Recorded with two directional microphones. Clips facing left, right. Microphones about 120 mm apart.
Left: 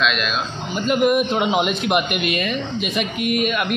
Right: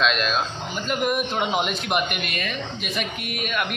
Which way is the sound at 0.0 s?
35° right (ahead or behind).